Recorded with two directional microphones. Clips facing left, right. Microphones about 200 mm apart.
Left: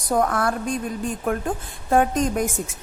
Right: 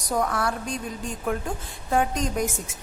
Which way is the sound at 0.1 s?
50° left (ahead or behind).